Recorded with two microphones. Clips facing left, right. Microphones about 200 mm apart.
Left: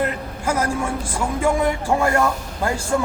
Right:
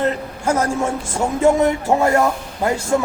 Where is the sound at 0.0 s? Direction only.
25° right (ahead or behind).